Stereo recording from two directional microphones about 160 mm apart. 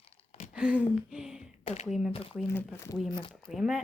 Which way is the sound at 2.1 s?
35° left (ahead or behind).